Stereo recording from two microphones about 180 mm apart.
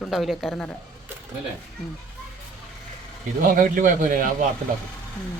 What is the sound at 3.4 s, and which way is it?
Speech, 50° right (ahead or behind).